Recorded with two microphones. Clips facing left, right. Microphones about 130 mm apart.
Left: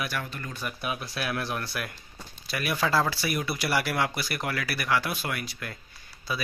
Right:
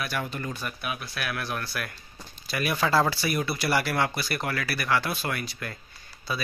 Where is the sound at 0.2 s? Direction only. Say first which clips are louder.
Right 5 dB; 20° right (ahead or behind).